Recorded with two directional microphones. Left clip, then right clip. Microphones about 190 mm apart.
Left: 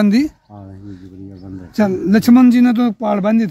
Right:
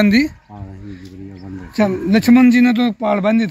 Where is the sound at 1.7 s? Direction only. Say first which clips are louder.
Left 1 dB; 30° left (ahead or behind).